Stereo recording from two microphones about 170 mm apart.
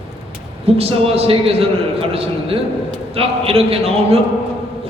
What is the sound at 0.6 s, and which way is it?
A man's voice, 35° right (ahead or behind).